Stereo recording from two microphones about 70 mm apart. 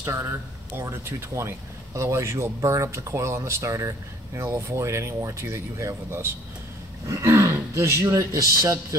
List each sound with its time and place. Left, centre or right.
0.0 s speech: right